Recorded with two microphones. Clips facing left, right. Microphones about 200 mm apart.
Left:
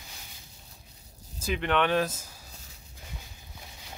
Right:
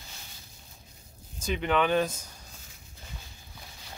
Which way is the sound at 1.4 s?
Centre (ahead or behind).